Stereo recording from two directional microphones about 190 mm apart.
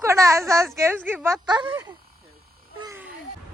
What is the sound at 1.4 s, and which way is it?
Speech, 25° right (ahead or behind).